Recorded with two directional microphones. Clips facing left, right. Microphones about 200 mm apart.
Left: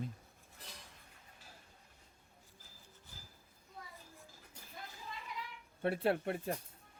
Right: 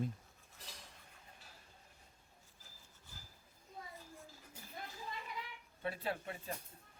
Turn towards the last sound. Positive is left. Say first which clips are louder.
# left 8 dB
turn(degrees=60)  # may be behind; listen again after turning